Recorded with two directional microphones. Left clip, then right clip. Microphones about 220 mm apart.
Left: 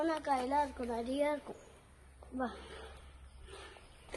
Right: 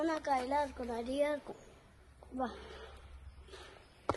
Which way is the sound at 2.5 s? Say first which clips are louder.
Even; 45° right (ahead or behind).